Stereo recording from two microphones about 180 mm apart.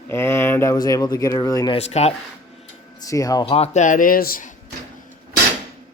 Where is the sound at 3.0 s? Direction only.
20° left (ahead or behind).